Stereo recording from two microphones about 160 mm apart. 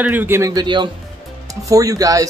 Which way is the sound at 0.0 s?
10° right (ahead or behind).